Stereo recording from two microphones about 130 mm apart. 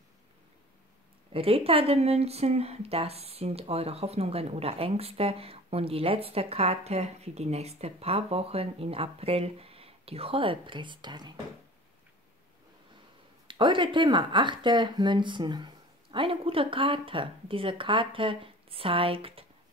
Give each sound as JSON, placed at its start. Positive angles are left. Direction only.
{"t": 1.3, "sound": "speech", "side_deg": -45}
{"t": 13.5, "sound": "speech", "side_deg": -40}